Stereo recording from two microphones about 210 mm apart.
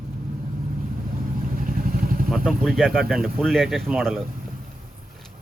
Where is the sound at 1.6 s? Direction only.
40° right (ahead or behind).